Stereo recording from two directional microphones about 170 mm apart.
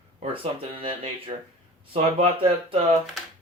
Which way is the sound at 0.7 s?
35° right (ahead or behind).